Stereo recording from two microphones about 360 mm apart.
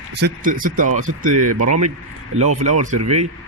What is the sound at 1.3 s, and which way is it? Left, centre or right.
Speech, right.